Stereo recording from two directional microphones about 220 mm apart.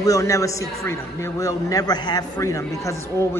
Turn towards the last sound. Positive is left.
turn(degrees=10)  # may be behind; listen again after turning